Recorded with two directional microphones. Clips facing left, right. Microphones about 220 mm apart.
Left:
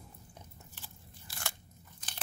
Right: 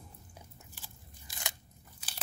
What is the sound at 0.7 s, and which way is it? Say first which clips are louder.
Crunch: left 1 dB; 15° right (ahead or behind).